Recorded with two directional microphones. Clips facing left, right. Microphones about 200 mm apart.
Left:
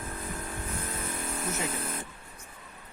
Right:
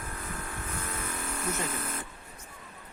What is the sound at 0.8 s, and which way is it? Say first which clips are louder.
Vehicle: left 1 dB; 30° left (ahead or behind).